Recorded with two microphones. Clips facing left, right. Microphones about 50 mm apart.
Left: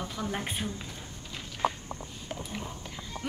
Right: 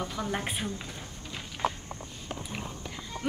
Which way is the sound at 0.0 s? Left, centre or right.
Centre.